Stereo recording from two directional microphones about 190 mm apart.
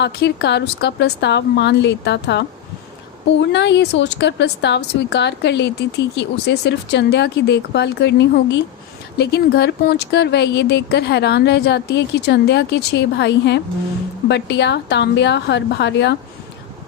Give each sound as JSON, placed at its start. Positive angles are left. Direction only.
{"t": 0.0, "sound": "a woman's voice", "side_deg": 60}